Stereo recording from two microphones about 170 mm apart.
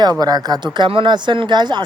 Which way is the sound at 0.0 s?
25° right (ahead or behind).